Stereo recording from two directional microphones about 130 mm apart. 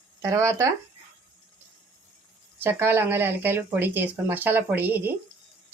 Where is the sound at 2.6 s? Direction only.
15° right (ahead or behind).